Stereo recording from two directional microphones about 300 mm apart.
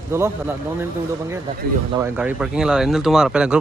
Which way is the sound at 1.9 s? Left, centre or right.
Centre.